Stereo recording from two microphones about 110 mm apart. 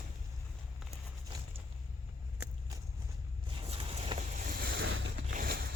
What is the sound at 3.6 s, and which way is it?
Vehicle, 65° right (ahead or behind).